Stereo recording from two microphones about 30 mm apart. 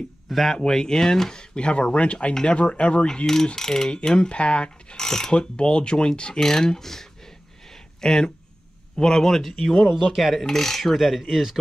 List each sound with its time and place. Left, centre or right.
0.3 s speech: centre
0.6 s speech: centre
1.3 s speech: left
3.5 s speech: centre; by 4.9 s left
4.9 s speech: centre
5.3 s speech: left
6.4 s a sound: left
8.0 s speech: left
10.1 s speech: centre
10.5 s speech: centre
10.8 s speech: centre